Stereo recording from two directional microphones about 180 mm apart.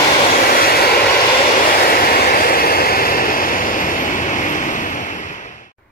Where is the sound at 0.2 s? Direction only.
55° left (ahead or behind).